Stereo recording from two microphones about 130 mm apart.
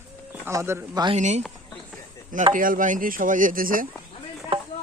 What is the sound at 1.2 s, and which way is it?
Speech, 65° right (ahead or behind).